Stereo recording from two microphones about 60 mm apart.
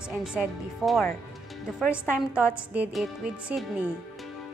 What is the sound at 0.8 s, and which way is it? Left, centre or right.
A woman's voice, centre.